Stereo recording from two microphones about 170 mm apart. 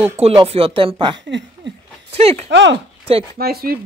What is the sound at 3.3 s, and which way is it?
Speech, 65° right (ahead or behind).